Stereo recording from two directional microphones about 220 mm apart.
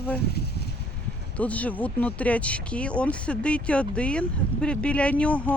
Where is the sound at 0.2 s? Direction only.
45° left (ahead or behind).